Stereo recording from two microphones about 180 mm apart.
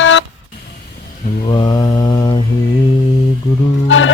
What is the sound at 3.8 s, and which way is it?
Music, 90° left.